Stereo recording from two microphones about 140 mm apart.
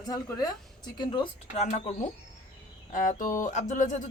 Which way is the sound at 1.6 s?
60° left (ahead or behind).